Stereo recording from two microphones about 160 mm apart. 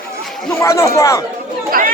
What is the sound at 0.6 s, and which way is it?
Speech, 20° left (ahead or behind).